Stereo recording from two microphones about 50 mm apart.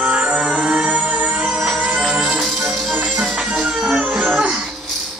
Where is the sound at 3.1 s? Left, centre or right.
Right.